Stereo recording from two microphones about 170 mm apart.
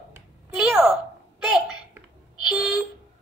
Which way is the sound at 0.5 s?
5° right (ahead or behind).